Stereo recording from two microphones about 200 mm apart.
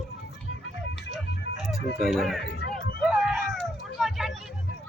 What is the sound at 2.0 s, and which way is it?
Speech, centre (ahead or behind).